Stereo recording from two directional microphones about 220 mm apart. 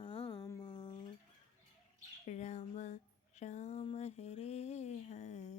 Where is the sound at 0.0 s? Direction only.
20° left (ahead or behind).